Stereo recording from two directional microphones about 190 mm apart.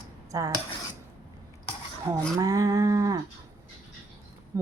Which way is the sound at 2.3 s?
15° right (ahead or behind).